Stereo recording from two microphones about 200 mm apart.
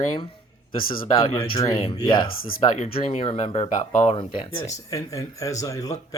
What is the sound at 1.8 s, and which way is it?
Speech, 25° left (ahead or behind).